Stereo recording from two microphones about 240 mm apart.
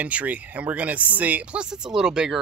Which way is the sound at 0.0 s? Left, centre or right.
Centre.